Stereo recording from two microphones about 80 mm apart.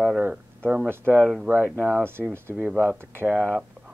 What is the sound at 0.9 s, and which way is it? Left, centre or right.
Speech, right.